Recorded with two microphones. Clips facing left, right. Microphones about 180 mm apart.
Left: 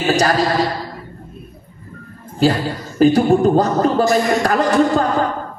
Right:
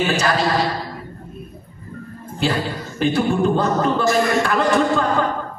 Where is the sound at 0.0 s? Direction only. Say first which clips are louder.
Left 4 dB; 40° left (ahead or behind).